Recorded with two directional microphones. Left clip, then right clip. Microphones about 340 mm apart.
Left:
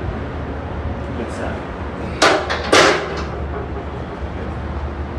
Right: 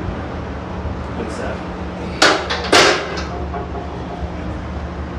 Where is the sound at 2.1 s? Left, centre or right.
Centre.